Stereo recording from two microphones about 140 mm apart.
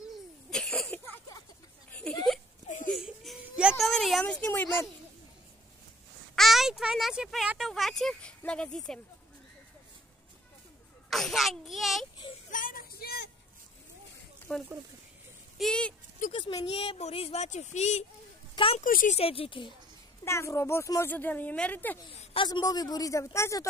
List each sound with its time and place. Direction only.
0.5 s cough: 5° left (ahead or behind)
1.9 s a sound: 5° left (ahead or behind)
6.3 s speech: centre (ahead or behind)
11.1 s a child's voice: centre (ahead or behind)
12.4 s a sound: 75° left (ahead or behind)
14.5 s speech: 10° left (ahead or behind)
16.3 s speech: 40° left (ahead or behind); by 18.0 s 55° left (ahead or behind)
18.5 s a sound: 40° left (ahead or behind)
18.9 s speech: 80° left
19.1 s speech: 45° left (ahead or behind)
20.2 s speech: 20° left (ahead or behind)
22.2 s a sound: 40° left (ahead or behind)
22.5 s speech: 30° left (ahead or behind)